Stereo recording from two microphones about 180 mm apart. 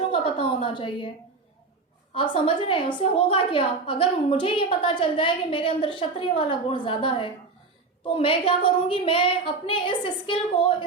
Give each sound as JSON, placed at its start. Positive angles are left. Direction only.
{"t": 0.1, "sound": "a woman's voice", "side_deg": 30}
{"t": 2.1, "sound": "a woman's voice", "side_deg": 30}